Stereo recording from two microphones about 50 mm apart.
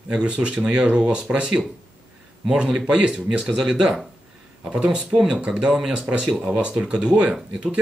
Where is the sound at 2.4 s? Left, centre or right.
Centre.